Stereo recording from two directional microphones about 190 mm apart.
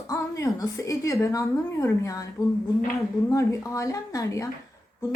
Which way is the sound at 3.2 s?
15° left (ahead or behind).